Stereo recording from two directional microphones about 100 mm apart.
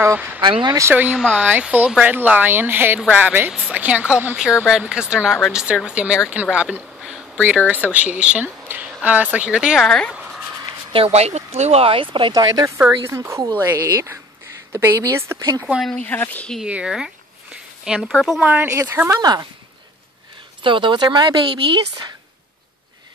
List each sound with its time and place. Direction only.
0.0 s speech: 20° right (ahead or behind)
0.4 s speech: 55° right (ahead or behind)
0.7 s speech: 30° right (ahead or behind)
1.1 s speech: 5° right (ahead or behind)
9.8 s speech: 10° left (ahead or behind)
10.9 s speech: 80° right; by 12.3 s 60° right (ahead or behind)
12.3 s speech: 45° right (ahead or behind)
13.0 s speech: 25° right (ahead or behind)
16.0 s speech: 15° left (ahead or behind)
16.6 s speech: 10° right (ahead or behind)
18.4 s speech: 15° right (ahead or behind)
18.7 s speech: 30° right (ahead or behind)
20.6 s speech: 55° right (ahead or behind)